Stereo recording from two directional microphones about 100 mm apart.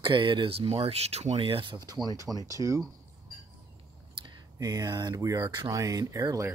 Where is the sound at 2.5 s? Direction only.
35° right (ahead or behind).